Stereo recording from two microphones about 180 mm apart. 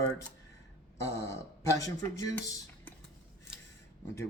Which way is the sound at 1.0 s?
15° left (ahead or behind).